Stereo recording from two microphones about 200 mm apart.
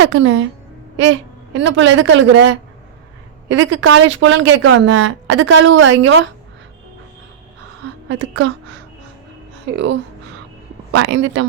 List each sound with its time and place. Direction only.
0.0 s speech: 80° right
1.5 s speech: 70° right (ahead or behind)
3.5 s speech: 75° right (ahead or behind)
8.2 s speech: 70° right (ahead or behind)
9.7 s speech: 60° right (ahead or behind)
10.9 s speech: 70° right (ahead or behind)